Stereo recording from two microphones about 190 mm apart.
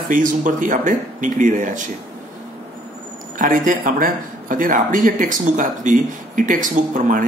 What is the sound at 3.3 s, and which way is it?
Speech, 45° right (ahead or behind).